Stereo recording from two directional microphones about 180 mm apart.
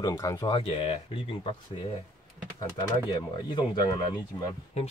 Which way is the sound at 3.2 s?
25° left (ahead or behind).